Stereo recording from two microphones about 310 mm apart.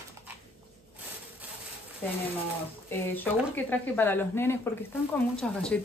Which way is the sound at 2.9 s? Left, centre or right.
Centre.